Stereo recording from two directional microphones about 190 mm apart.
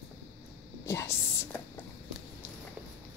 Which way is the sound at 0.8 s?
15° left (ahead or behind).